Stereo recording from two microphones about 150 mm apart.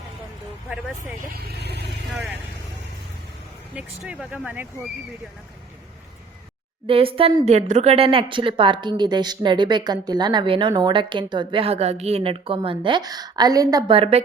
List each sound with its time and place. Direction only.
1.4 s speech: 90° right
3.8 s speech: 5° right (ahead or behind)
6.8 s a woman's voice: 35° right (ahead or behind)
13.9 s a woman's voice: 40° right (ahead or behind)